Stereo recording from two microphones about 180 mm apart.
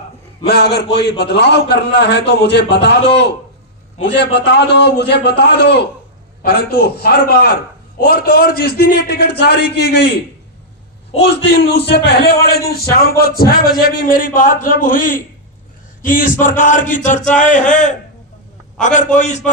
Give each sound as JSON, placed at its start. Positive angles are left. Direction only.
{"t": 0.4, "sound": "a man's voice", "side_deg": 65}
{"t": 4.0, "sound": "a man's voice", "side_deg": 70}
{"t": 11.3, "sound": "a man's voice", "side_deg": 70}